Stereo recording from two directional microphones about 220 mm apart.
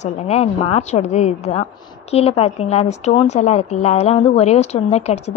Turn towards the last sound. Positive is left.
turn(degrees=30)  # may be behind; listen again after turning